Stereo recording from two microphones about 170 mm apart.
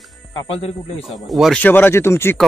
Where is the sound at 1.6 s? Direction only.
10° left (ahead or behind).